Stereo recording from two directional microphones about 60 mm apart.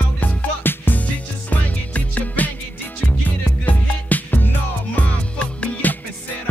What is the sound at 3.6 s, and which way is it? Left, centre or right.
Music, left.